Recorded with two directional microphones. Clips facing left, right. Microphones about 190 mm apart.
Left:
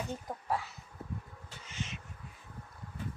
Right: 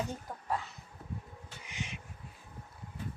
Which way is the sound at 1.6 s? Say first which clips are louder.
Left 1 dB; 15° right (ahead or behind).